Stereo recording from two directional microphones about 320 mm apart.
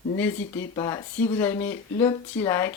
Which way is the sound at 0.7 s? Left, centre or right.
Centre.